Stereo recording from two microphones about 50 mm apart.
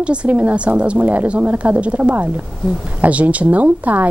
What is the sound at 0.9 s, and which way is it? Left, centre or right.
A woman's voice, right.